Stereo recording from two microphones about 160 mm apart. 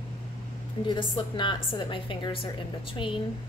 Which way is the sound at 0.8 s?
30° left (ahead or behind).